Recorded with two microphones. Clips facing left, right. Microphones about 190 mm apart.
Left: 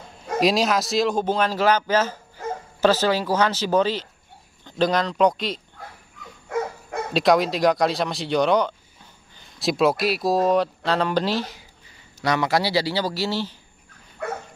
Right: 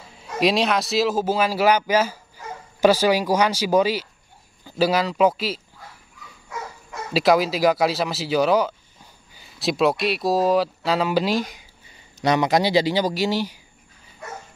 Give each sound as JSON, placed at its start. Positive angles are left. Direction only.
{"t": 0.4, "sound": "a man's voice", "side_deg": 0}
{"t": 7.2, "sound": "a man's voice", "side_deg": -5}
{"t": 14.2, "sound": "dog", "side_deg": 60}